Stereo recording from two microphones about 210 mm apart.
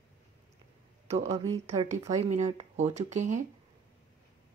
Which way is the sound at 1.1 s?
30° right (ahead or behind).